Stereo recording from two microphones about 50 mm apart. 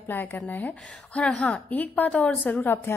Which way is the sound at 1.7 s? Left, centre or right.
Left.